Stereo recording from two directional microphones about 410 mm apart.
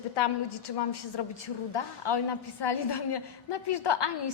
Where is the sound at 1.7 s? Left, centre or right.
Left.